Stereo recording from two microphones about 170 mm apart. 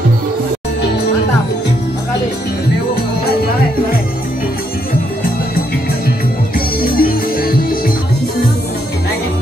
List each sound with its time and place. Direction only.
6.8 s music: 60° left (ahead or behind)